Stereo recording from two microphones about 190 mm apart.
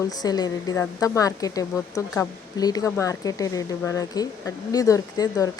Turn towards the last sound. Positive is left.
turn(degrees=20)  # may be behind; listen again after turning